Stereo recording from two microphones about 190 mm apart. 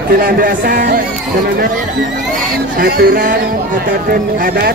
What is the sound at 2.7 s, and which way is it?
A woman's voice, 50° right (ahead or behind).